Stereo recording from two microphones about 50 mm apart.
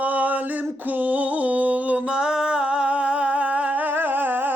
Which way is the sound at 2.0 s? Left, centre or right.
Centre.